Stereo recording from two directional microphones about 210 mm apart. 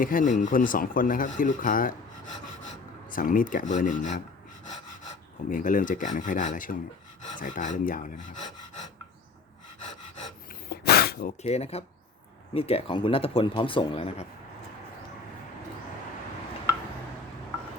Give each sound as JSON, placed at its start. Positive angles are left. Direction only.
{"t": 0.0, "sound": "speech", "side_deg": 40}
{"t": 3.1, "sound": "speech", "side_deg": 40}
{"t": 5.5, "sound": "speech", "side_deg": 40}
{"t": 10.7, "sound": "a sound", "side_deg": 50}
{"t": 11.4, "sound": "speech", "side_deg": 30}